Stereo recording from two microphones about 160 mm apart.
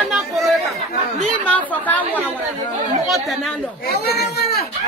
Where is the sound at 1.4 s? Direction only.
10° left (ahead or behind).